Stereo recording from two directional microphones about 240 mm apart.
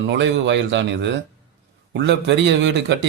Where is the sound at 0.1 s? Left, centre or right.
Right.